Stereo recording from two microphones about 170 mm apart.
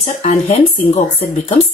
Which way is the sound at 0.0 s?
40° left (ahead or behind).